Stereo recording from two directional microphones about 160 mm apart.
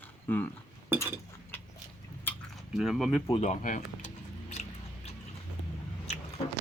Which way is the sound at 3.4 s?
50° left (ahead or behind).